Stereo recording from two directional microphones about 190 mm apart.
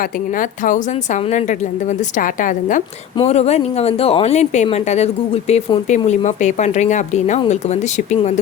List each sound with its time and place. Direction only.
0.0 s a woman's voice: 45° left (ahead or behind)